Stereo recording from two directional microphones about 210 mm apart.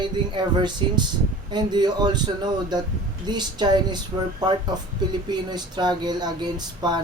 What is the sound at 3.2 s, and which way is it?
Speech, 20° right (ahead or behind).